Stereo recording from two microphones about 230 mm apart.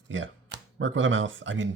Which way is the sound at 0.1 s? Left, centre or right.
Right.